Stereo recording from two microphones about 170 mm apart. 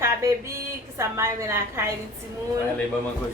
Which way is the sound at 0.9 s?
15° right (ahead or behind).